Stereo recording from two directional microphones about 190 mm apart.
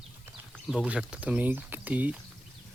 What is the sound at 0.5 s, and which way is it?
Speech, centre (ahead or behind).